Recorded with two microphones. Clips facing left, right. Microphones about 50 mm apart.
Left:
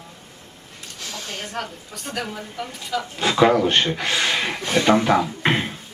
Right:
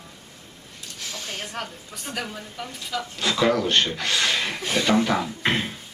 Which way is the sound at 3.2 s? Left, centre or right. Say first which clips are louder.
Left 5 dB; left.